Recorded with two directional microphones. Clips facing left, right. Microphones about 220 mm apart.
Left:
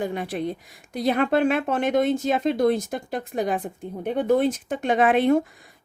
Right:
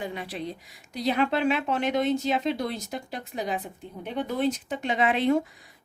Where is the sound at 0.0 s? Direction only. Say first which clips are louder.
Left 6 dB; 50° left (ahead or behind).